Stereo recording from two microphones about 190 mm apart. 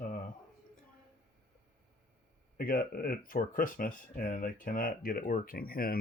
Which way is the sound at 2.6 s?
50° left (ahead or behind).